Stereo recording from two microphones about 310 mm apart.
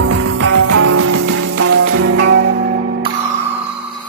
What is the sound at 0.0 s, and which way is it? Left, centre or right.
Music, right.